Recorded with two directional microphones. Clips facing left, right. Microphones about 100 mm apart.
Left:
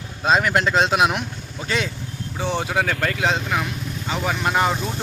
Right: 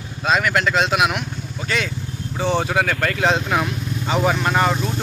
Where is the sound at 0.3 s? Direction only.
30° left (ahead or behind).